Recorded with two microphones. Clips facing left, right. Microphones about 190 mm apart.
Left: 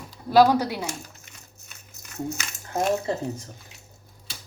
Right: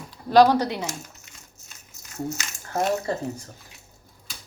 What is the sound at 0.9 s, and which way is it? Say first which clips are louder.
Crumpling: even; 60° left (ahead or behind).